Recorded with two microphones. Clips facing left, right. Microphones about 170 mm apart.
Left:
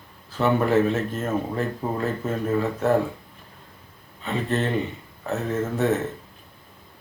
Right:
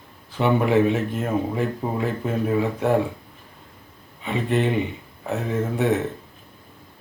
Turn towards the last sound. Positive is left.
turn(degrees=-15)  # may be behind; listen again after turning